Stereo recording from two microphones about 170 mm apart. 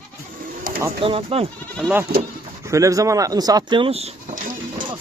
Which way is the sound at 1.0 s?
35° right (ahead or behind).